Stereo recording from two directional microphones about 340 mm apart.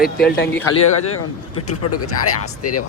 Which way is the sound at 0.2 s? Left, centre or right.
Left.